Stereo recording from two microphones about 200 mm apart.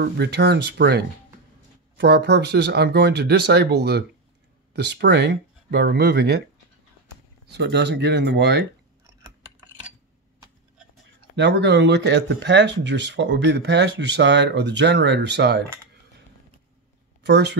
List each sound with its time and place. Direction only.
0.0 s speech: 55° right (ahead or behind)
7.4 s speech: 55° right (ahead or behind)
11.1 s speech: 60° right (ahead or behind)
17.2 s speech: 60° right (ahead or behind)